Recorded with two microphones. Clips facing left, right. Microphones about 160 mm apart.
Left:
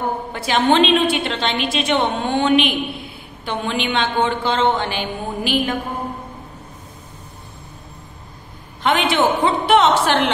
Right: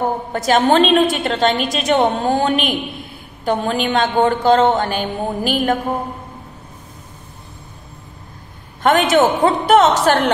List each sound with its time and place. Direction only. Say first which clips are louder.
0.3 s a woman's voice: right 3 dB; 45° right (ahead or behind)
8.8 s a woman's voice: right 4 dB; 45° right (ahead or behind)